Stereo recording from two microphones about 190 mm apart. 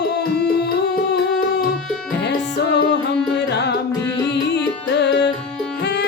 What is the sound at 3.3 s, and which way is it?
Music, 60° left (ahead or behind).